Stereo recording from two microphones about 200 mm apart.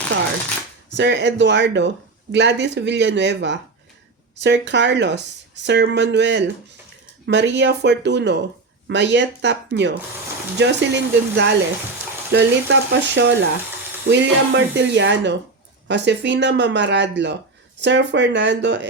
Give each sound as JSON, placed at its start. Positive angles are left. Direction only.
{"t": 0.9, "sound": "speech", "side_deg": -60}